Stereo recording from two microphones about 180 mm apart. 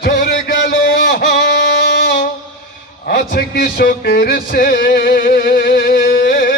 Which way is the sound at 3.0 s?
55° left (ahead or behind).